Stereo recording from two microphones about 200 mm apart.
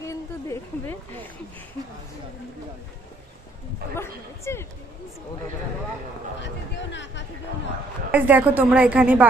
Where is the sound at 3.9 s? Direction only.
15° left (ahead or behind).